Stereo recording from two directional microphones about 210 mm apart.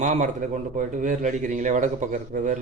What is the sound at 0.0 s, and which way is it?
Speech, 35° right (ahead or behind).